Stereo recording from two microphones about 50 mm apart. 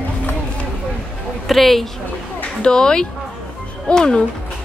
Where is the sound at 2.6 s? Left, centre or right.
Centre.